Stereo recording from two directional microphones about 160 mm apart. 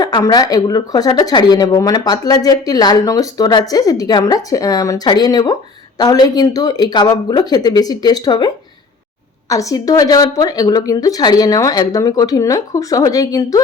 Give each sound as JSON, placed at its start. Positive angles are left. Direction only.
{"t": 0.0, "sound": "speech", "side_deg": 25}